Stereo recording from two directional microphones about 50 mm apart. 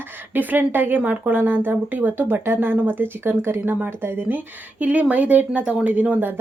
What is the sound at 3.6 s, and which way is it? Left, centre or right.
A woman's voice, right.